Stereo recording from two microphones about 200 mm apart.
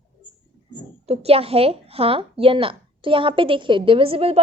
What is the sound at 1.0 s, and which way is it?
A woman's voice, 30° right (ahead or behind).